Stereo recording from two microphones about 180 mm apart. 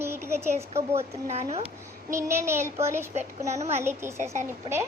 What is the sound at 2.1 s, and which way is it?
A child's voice, 15° right (ahead or behind).